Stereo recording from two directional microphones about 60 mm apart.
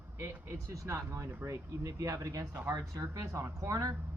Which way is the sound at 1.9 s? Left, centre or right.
Right.